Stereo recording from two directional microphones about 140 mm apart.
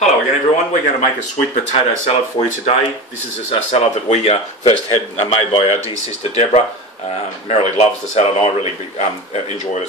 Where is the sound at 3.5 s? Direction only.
50° left (ahead or behind).